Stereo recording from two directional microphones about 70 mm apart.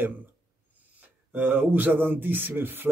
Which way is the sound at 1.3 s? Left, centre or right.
Right.